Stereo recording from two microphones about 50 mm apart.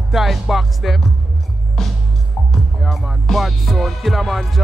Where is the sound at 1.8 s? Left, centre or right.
Centre.